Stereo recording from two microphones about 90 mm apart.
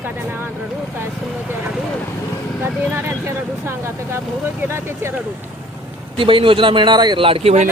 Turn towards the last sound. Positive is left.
turn(degrees=-90)